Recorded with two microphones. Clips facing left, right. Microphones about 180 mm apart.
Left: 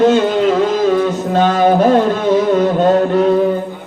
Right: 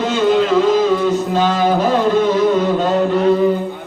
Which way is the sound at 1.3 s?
55° left (ahead or behind).